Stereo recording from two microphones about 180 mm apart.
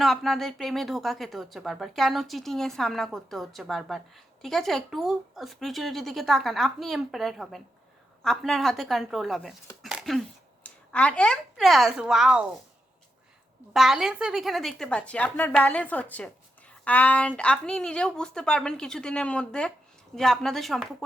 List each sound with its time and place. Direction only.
0.0 s speech: centre (ahead or behind)
13.7 s speech: centre (ahead or behind)